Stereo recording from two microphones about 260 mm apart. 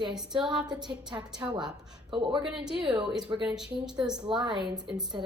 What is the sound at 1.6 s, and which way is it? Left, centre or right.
Speech, centre.